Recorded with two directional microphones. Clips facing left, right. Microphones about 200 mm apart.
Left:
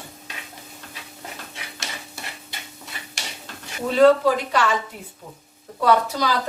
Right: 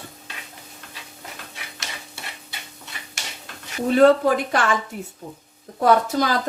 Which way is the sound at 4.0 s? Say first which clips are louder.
Even; 55° right (ahead or behind).